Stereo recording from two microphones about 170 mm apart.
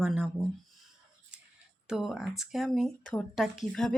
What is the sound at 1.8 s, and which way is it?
Speech, 5° right (ahead or behind).